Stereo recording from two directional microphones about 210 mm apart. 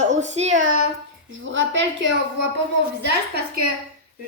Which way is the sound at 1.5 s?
60° right (ahead or behind).